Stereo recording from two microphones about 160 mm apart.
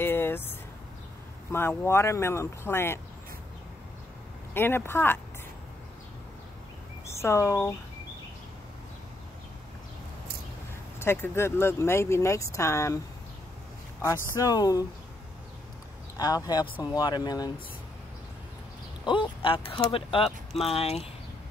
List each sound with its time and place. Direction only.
0.0 s vehicle: 15° left (ahead or behind)
1.5 s speech: 15° left (ahead or behind)
4.6 s speech: 15° left (ahead or behind)
7.2 s speech: 15° left (ahead or behind)
11.0 s speech: 15° left (ahead or behind)
14.0 s speech: 25° left (ahead or behind)
16.2 s speech: 25° left (ahead or behind)
19.0 s speech: 30° left (ahead or behind)